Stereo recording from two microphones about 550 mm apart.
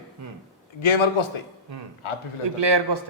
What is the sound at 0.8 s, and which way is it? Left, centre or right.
A man's voice, left.